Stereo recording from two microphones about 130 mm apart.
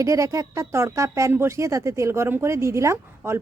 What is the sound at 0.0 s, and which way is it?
Speech, 25° right (ahead or behind).